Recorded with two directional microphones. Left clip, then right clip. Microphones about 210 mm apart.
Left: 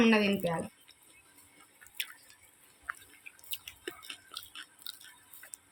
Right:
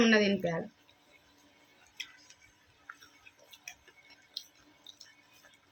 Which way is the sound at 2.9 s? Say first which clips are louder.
Left 9 dB; 25° left (ahead or behind).